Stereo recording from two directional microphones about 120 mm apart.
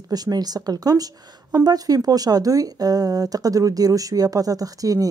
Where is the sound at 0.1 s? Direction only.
35° right (ahead or behind).